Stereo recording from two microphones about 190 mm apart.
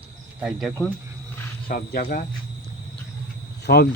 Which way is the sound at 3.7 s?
60° left (ahead or behind).